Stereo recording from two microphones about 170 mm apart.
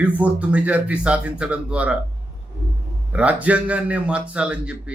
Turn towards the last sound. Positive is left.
turn(degrees=-5)  # may be behind; listen again after turning